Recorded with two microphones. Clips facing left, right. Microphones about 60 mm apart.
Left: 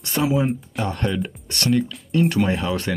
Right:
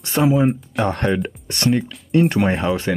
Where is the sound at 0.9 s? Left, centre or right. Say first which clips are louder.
Right 4 dB; right.